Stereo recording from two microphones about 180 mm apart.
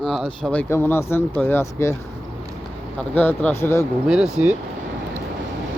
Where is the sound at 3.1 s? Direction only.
10° left (ahead or behind).